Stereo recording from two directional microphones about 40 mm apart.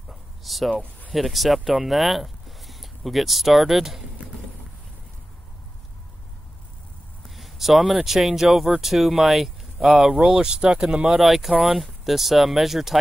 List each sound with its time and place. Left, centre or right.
0.1 s a sound: centre
1.1 s speech: centre
7.2 s speech: centre
10.0 s speech: centre
11.1 s speech: centre